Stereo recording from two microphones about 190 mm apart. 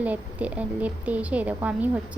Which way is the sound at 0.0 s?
10° right (ahead or behind).